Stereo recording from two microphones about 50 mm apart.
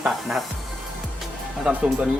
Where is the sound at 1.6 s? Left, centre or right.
Right.